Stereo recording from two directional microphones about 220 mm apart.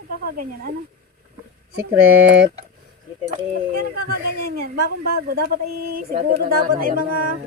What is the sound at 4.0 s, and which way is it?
Speech, 45° right (ahead or behind).